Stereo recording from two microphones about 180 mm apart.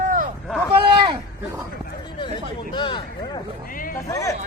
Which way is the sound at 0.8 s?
25° right (ahead or behind).